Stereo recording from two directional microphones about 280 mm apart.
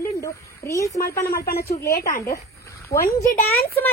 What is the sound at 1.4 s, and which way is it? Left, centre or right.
Speech, left.